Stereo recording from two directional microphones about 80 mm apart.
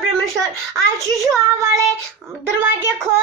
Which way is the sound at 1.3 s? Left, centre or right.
Right.